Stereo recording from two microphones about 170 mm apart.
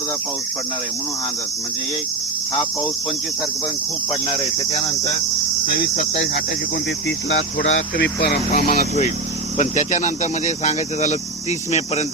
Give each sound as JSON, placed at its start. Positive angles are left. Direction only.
{"t": 5.6, "sound": "cricket", "side_deg": 55}
{"t": 7.3, "sound": "speech", "side_deg": 90}
{"t": 9.6, "sound": "speech", "side_deg": 45}